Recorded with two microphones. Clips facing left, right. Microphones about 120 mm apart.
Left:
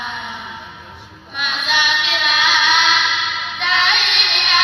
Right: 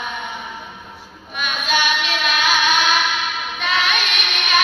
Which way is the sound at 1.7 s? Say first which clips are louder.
Right 1 dB; 45° right (ahead or behind).